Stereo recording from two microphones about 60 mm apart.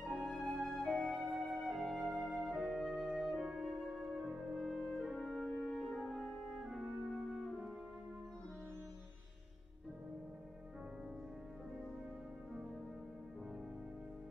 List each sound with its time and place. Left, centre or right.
0.2 s flute: centre
1.0 s music: centre
2.5 s music: centre
3.3 s music: centre
4.6 s music: centre
6.6 s music: centre